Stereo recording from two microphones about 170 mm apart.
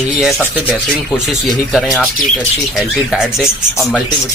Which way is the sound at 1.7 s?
Centre (ahead or behind).